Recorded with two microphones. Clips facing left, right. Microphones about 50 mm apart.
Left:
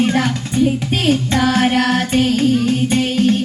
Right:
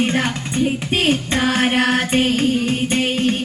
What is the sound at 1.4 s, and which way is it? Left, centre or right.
Music, right.